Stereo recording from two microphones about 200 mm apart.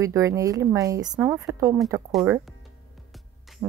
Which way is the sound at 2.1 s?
Centre (ahead or behind).